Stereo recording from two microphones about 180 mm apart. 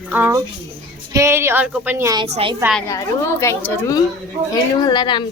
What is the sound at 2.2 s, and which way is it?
Speech, 35° right (ahead or behind).